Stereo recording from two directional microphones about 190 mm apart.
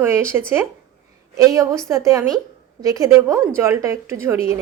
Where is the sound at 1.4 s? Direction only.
15° right (ahead or behind).